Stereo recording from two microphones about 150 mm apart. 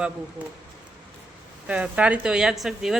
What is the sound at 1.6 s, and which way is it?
Speech, 10° right (ahead or behind).